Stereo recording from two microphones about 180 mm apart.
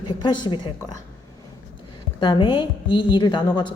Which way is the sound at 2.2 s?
25° left (ahead or behind).